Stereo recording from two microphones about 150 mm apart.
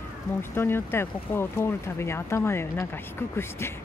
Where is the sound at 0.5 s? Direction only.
15° left (ahead or behind).